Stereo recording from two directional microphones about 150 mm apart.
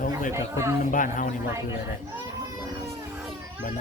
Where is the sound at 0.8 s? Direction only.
60° left (ahead or behind).